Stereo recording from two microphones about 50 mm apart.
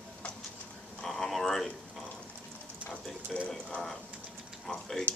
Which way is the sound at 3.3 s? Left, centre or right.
Centre.